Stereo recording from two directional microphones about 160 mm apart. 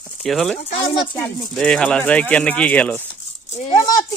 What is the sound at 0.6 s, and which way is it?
Speech, 40° left (ahead or behind).